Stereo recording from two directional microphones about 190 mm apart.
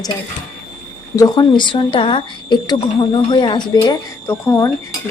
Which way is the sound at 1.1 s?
20° left (ahead or behind).